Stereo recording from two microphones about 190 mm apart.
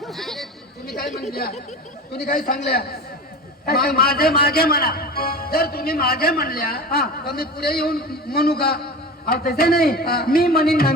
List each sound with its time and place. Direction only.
0.0 s chatter: centre (ahead or behind)
1.3 s a man's voice: 55° left (ahead or behind)